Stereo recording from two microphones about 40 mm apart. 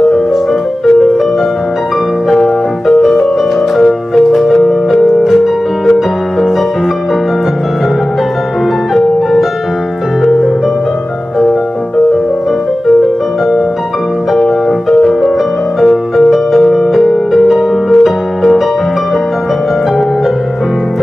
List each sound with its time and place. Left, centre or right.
2.2 s music: centre
4.3 s music: centre
8.9 s music: centre
14.3 s music: centre